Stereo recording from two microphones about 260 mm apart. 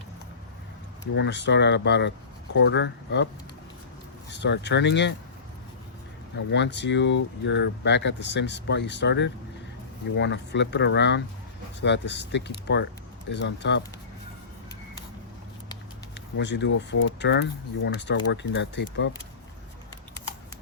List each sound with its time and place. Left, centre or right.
1.1 s speech: left
4.3 s speech: left
6.5 s speech: left
16.1 s speech: left